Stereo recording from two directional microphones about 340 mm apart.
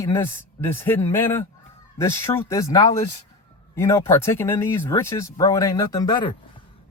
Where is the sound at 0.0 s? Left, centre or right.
Centre.